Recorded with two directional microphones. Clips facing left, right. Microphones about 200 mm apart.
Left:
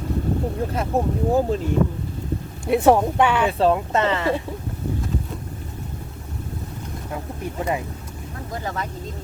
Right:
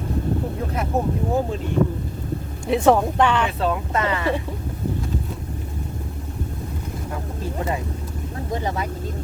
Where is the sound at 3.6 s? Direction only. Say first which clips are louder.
Left 4 dB; 30° left (ahead or behind).